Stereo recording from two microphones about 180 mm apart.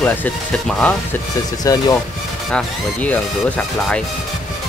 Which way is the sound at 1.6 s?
20° left (ahead or behind).